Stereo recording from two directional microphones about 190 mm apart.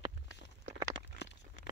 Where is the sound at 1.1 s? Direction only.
65° left (ahead or behind).